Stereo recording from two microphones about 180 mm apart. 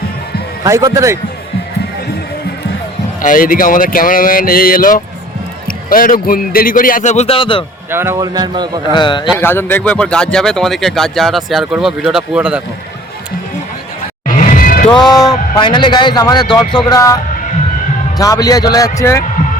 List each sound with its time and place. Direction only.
0.6 s a man's voice: 20° right (ahead or behind)
3.2 s a man's voice: 50° left (ahead or behind); by 7.6 s 30° left (ahead or behind)
7.9 s speech: 15° right (ahead or behind)
8.9 s a man's voice: 25° left (ahead or behind)
9.4 s speech: 10° left (ahead or behind); by 12.6 s 5° right (ahead or behind)
14.3 s music: 45° left (ahead or behind)
14.9 s a man's voice: 20° left (ahead or behind)
18.2 s a man's voice: 20° left (ahead or behind)